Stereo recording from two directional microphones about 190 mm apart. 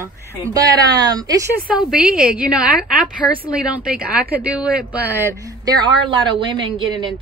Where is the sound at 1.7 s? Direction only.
5° right (ahead or behind).